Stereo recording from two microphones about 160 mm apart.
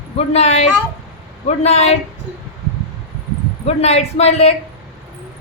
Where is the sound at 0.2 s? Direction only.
45° left (ahead or behind).